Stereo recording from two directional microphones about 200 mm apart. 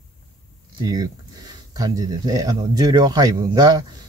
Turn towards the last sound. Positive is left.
turn(degrees=-20)  # may be behind; listen again after turning